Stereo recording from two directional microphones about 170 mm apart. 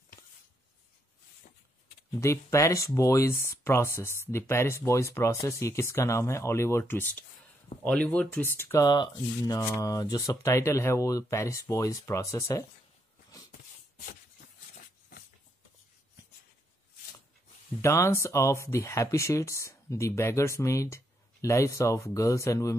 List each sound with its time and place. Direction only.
2.1 s speech: 15° left (ahead or behind)
17.8 s speech: 15° left (ahead or behind)